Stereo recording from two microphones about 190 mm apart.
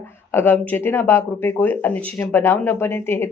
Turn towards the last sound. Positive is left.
turn(degrees=10)  # may be behind; listen again after turning